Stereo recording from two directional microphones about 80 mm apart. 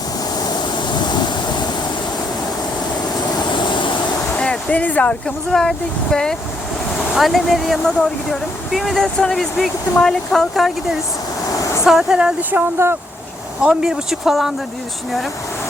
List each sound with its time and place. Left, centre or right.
0.3 s waves: left
3.3 s vehicle: left
4.4 s a sound: centre
5.5 s speech: centre
11.9 s speech: centre
12.4 s speech: right
13.6 s speech: centre